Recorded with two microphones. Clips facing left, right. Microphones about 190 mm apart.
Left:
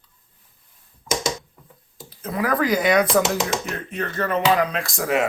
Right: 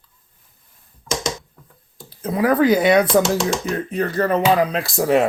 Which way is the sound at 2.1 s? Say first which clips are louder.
Right 5 dB; 30° right (ahead or behind).